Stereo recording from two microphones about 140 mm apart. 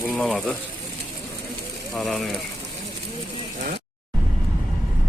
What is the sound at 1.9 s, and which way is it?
Speech, centre (ahead or behind).